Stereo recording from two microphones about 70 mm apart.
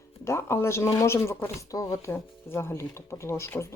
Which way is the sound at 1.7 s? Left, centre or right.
Left.